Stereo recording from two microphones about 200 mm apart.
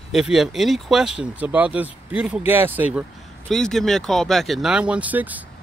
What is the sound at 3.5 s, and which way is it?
Speech, centre (ahead or behind).